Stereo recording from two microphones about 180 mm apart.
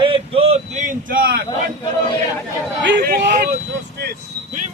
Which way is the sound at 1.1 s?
55° right (ahead or behind).